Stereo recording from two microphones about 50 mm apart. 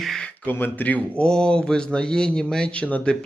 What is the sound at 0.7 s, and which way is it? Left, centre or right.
Speech, left.